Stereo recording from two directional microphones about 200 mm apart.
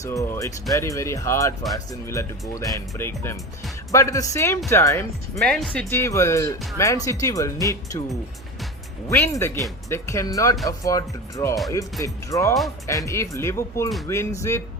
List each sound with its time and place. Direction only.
0.0 s speech: 15° left (ahead or behind)
5.4 s speech: centre (ahead or behind)
5.9 s speech: 15° left (ahead or behind)